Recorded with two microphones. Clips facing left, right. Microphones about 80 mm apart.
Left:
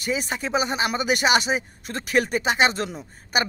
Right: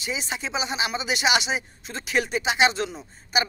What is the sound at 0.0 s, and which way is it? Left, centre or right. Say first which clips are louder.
Speech: left 4 dB; left.